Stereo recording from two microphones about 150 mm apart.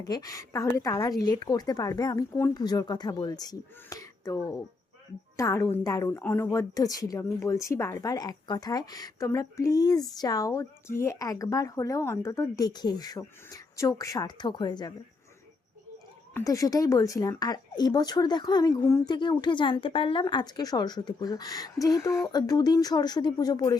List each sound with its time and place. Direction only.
0.0 s a woman's voice: 25° left (ahead or behind)
16.3 s a woman's voice: 20° left (ahead or behind)